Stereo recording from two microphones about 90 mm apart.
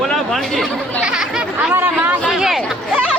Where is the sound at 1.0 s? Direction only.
10° right (ahead or behind).